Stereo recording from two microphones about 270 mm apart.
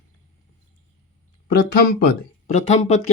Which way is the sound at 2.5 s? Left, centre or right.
Left.